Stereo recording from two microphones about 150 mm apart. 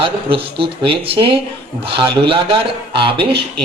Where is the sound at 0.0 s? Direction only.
35° right (ahead or behind).